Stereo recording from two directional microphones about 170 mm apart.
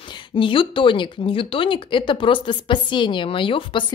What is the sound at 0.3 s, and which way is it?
Speech, 30° left (ahead or behind).